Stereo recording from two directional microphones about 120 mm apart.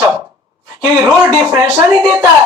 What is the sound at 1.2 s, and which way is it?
Speech, 25° right (ahead or behind).